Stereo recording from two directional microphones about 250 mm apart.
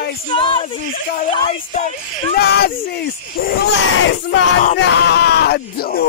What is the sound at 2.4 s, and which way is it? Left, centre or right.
Speech, left.